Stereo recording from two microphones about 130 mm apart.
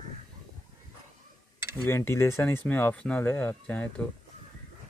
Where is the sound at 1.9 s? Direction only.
20° left (ahead or behind).